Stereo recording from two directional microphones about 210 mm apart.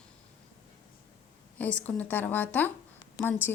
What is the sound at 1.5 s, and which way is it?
Speech, 5° left (ahead or behind).